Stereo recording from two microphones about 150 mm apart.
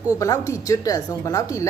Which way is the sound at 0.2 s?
20° left (ahead or behind).